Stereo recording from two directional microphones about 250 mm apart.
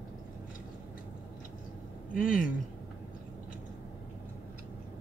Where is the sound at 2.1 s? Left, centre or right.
Left.